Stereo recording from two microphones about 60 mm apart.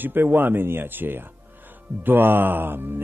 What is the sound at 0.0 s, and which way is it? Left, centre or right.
Speech, right.